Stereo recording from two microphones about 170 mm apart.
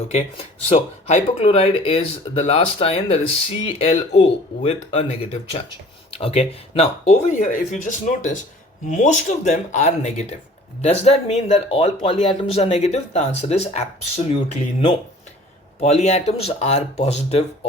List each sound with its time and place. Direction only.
0.7 s speech: 40° left (ahead or behind)